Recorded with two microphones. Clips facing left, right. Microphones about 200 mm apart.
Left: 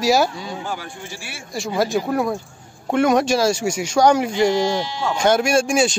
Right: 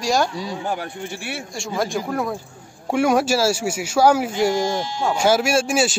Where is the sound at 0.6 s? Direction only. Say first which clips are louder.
Right 3 dB; 55° right (ahead or behind).